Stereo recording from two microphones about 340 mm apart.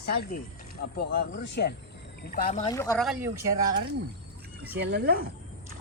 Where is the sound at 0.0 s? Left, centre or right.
Left.